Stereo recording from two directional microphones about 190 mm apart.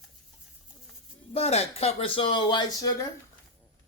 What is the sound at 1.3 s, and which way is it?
Speech, 30° left (ahead or behind).